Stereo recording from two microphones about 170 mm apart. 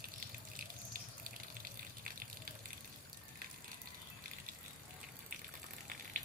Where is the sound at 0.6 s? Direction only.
55° right (ahead or behind).